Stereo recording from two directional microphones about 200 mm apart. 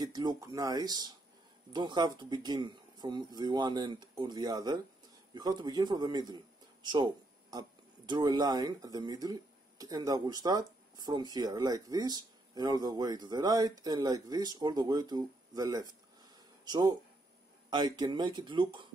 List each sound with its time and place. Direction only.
0.0 s speech: 20° right (ahead or behind)